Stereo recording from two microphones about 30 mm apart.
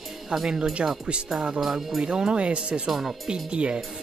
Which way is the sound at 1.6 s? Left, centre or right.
Centre.